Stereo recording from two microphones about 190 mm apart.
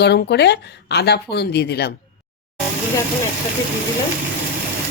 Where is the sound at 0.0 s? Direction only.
60° left (ahead or behind).